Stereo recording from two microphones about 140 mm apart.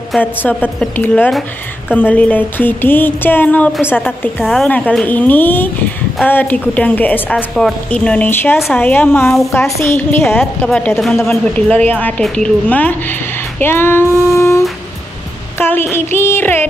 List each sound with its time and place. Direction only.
0.2 s a woman's voice: 15° left (ahead or behind)
13.6 s female singing: 15° left (ahead or behind)
15.6 s a woman's voice: 15° left (ahead or behind)